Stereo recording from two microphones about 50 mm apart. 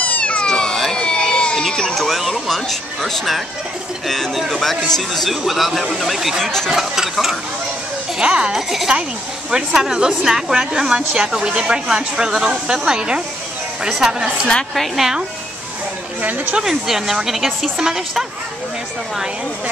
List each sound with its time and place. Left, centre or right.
0.0 s cat: left
0.5 s a sound: centre
2.0 s a sound: centre
2.4 s speech: centre
6.4 s speech: centre
6.7 s speech: centre
8.2 s a woman's voice: centre
16.2 s speech: right
16.5 s a woman's voice: centre